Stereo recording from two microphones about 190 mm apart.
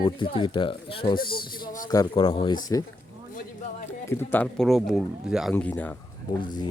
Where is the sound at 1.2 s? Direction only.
50° left (ahead or behind).